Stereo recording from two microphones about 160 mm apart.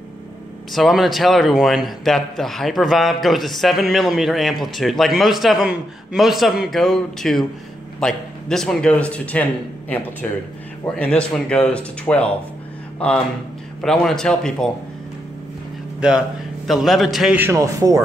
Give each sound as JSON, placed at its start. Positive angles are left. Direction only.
{"t": 0.7, "sound": "a man's voice", "side_deg": 0}
{"t": 13.7, "sound": "a man's voice", "side_deg": 5}
{"t": 16.0, "sound": "a man's voice", "side_deg": -5}
{"t": 17.4, "sound": "a man's voice", "side_deg": -20}